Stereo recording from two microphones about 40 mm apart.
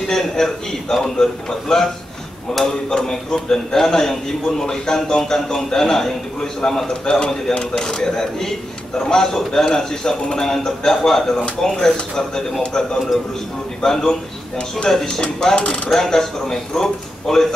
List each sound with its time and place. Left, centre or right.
0.1 s a man's voice: centre
2.9 s a man's voice: centre
13.8 s a man's voice: centre
15.9 s a man's voice: centre